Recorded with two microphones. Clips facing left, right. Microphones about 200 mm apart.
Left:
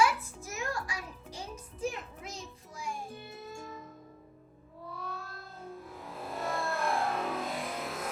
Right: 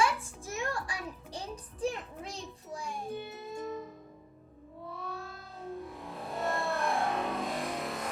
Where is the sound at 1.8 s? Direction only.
30° right (ahead or behind).